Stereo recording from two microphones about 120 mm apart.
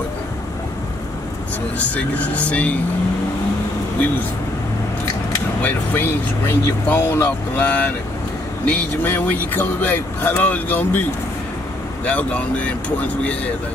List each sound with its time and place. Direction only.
1.8 s speech: 10° left (ahead or behind)
5.6 s speech: 15° left (ahead or behind)
12.0 s speech: 10° left (ahead or behind)